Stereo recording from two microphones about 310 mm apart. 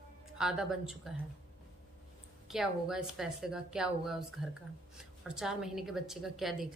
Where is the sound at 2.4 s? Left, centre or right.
Centre.